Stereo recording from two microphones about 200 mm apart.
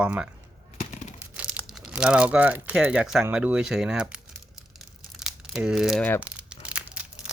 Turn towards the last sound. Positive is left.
turn(degrees=-5)  # may be behind; listen again after turning